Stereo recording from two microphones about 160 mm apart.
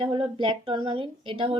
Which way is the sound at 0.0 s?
30° right (ahead or behind).